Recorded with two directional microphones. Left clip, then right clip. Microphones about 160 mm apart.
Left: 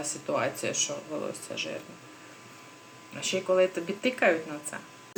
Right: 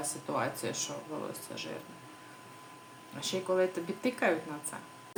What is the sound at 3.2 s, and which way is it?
Speech, 10° right (ahead or behind).